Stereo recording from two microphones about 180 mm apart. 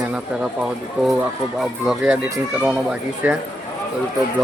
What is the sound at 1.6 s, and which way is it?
Speech, 5° right (ahead or behind).